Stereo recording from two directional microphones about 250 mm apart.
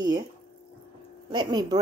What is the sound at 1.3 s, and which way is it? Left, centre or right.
Sizzle, centre.